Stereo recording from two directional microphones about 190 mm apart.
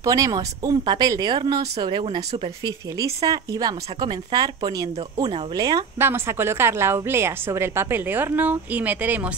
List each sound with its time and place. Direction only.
0.0 s speech: 15° right (ahead or behind)